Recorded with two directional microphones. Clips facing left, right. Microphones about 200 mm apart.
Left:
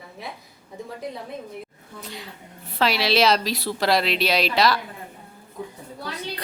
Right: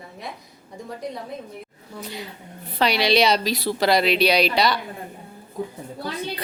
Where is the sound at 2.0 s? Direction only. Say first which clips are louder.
Right 3 dB; centre (ahead or behind).